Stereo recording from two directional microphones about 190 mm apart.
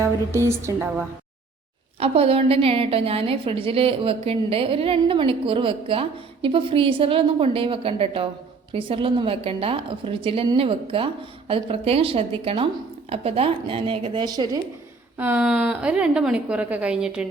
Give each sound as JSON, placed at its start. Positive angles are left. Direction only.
{"t": 0.0, "sound": "speech", "side_deg": -15}
{"t": 2.0, "sound": "a woman's voice", "side_deg": -30}
{"t": 15.2, "sound": "a woman's voice", "side_deg": -10}